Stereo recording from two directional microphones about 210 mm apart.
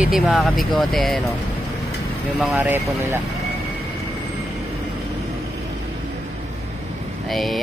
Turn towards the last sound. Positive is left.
turn(degrees=0)  # may be behind; listen again after turning